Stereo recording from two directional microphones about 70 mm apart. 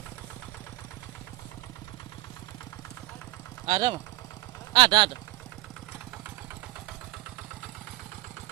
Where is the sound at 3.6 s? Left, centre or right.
Right.